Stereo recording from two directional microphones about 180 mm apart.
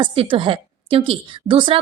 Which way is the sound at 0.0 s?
30° right (ahead or behind).